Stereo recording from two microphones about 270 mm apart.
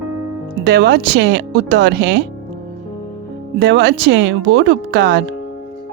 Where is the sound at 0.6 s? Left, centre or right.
Right.